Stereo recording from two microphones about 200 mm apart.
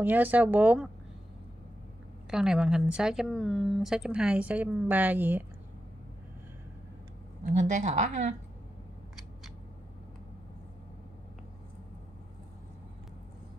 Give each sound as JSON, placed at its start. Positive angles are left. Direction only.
{"t": 0.0, "sound": "speech", "side_deg": -10}
{"t": 2.3, "sound": "speech", "side_deg": -5}
{"t": 7.4, "sound": "speech", "side_deg": -35}